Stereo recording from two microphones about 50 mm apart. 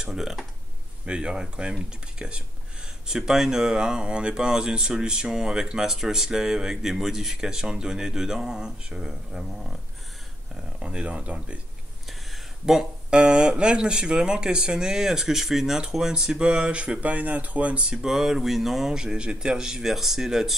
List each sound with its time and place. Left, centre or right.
0.0 s speech: centre
1.0 s speech: centre
3.1 s speech: centre
10.8 s speech: centre
12.1 s a sound: centre
13.1 s speech: centre; by 17.8 s right
17.8 s speech: centre
18.1 s speech: centre
18.9 s speech: centre